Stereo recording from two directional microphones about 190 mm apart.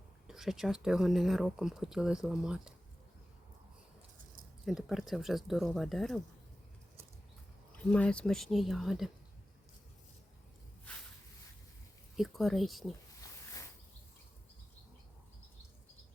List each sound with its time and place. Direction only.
0.3 s speech: centre (ahead or behind)
4.6 s speech: centre (ahead or behind)
7.8 s speech: 5° left (ahead or behind)
12.1 s speech: centre (ahead or behind)
13.2 s a sound: 20° left (ahead or behind)